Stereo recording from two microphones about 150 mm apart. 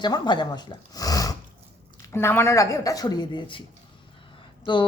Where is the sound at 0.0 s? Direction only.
30° left (ahead or behind).